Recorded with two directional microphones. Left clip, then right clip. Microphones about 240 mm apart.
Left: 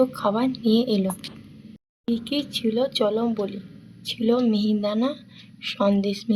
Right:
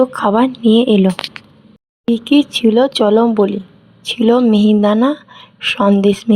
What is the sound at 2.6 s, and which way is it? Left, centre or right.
A woman's voice, right.